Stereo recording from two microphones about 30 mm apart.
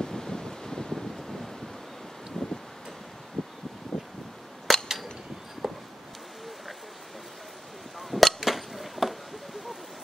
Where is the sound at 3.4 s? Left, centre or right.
Centre.